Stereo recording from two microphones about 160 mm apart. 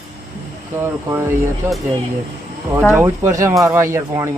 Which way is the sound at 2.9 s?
15° right (ahead or behind).